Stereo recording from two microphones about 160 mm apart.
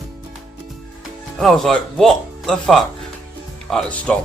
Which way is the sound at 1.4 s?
Centre (ahead or behind).